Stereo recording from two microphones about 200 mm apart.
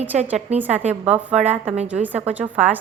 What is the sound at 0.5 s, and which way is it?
A woman's voice, 10° right (ahead or behind).